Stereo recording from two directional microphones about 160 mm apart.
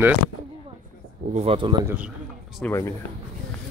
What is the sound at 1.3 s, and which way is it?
Speech, 40° right (ahead or behind).